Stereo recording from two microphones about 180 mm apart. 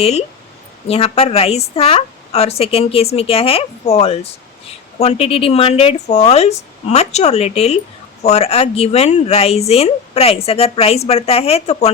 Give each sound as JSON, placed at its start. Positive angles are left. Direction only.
{"t": 0.0, "sound": "a woman's voice", "side_deg": 35}